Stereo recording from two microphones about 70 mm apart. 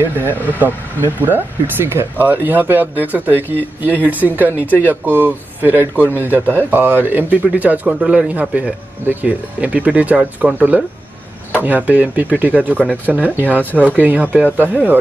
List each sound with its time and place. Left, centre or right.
0.5 s speech: right
12.7 s speech: left
13.1 s speech: right